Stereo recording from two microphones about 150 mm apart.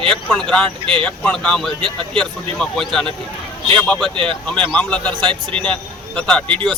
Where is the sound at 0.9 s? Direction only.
35° right (ahead or behind).